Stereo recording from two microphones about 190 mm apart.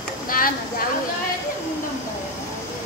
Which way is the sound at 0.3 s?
50° left (ahead or behind).